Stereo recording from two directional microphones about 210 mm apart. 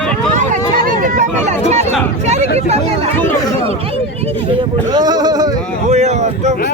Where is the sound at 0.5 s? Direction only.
40° right (ahead or behind).